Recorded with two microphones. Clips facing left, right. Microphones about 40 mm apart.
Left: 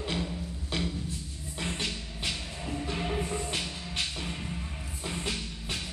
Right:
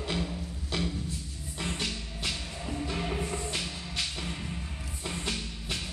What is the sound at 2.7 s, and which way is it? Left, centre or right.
Music, centre.